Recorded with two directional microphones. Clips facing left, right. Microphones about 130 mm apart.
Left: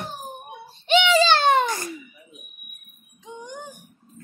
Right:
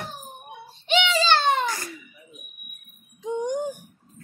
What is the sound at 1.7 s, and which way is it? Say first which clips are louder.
Giggle: left 3 dB; 20° left (ahead or behind).